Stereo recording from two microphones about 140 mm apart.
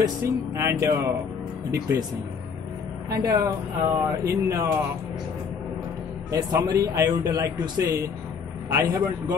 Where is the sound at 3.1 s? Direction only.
25° right (ahead or behind).